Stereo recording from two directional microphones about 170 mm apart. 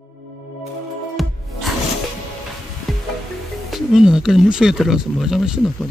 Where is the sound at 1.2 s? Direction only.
Centre (ahead or behind).